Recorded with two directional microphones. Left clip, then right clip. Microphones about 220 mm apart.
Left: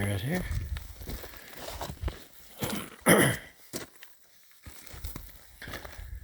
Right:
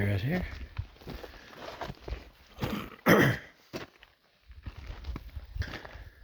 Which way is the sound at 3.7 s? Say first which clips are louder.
Left 1 dB; 50° left (ahead or behind).